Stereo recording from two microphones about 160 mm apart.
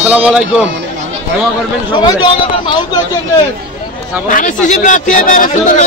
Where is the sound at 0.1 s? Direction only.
5° right (ahead or behind).